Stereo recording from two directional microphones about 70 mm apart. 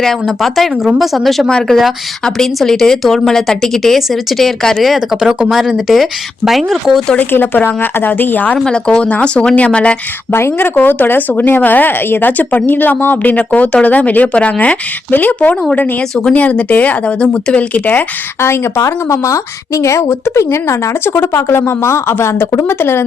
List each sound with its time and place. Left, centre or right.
0.0 s speech: centre
7.2 s speech: left
8.5 s speech: centre
10.3 s speech: left
18.3 s a woman's voice: left